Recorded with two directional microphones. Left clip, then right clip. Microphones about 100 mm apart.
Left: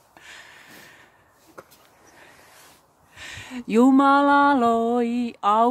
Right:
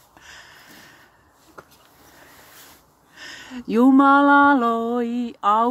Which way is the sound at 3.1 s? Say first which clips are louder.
Even; 20° left (ahead or behind).